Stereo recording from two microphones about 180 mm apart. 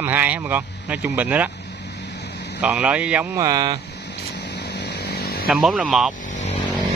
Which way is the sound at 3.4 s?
20° right (ahead or behind).